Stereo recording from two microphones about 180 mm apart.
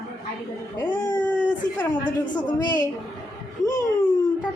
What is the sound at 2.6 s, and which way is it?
Speech, 20° left (ahead or behind).